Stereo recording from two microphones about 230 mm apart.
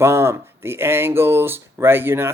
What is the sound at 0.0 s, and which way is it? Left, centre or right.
Speech, centre.